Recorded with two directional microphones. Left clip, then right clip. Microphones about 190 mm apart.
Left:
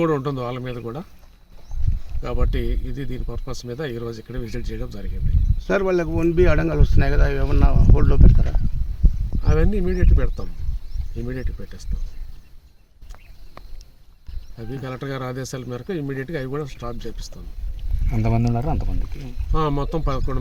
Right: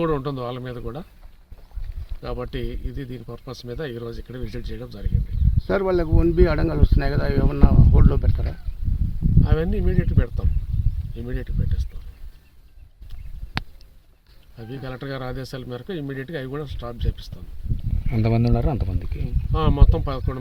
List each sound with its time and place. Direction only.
0.0 s speech: centre (ahead or behind)
2.2 s speech: centre (ahead or behind)
5.6 s speech: 50° right (ahead or behind)
9.4 s speech: centre (ahead or behind)
14.5 s speech: 5° left (ahead or behind)
18.1 s speech: 55° right (ahead or behind)
19.5 s speech: centre (ahead or behind)